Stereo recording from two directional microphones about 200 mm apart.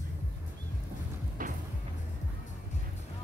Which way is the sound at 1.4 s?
45° right (ahead or behind).